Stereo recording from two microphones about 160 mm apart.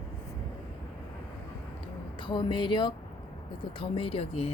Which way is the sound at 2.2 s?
30° left (ahead or behind).